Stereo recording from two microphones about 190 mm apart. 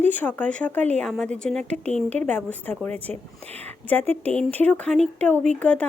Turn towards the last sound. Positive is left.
turn(degrees=5)  # may be behind; listen again after turning